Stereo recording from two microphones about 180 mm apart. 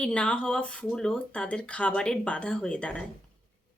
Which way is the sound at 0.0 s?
5° left (ahead or behind).